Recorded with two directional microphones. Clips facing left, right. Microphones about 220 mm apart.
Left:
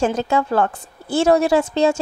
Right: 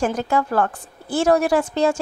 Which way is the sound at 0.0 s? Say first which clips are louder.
Left 2 dB; 25° left (ahead or behind).